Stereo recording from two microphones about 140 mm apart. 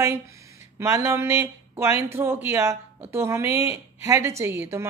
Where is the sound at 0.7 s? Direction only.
20° right (ahead or behind).